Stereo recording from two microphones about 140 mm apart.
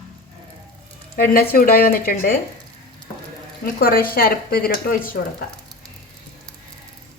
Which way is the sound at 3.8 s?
90° left.